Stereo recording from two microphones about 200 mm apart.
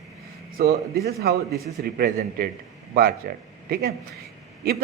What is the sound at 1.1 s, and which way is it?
A man's voice, 55° right (ahead or behind).